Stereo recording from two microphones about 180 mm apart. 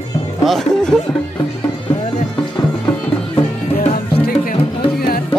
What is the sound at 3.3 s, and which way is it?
Music, 35° left (ahead or behind).